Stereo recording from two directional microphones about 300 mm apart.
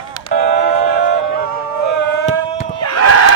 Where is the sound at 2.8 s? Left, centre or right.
Left.